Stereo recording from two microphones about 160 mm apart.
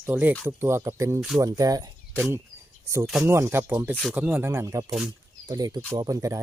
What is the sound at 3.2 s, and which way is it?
Speech, 15° right (ahead or behind).